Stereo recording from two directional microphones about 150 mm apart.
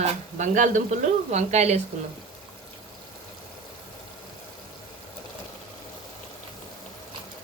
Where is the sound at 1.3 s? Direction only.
45° right (ahead or behind).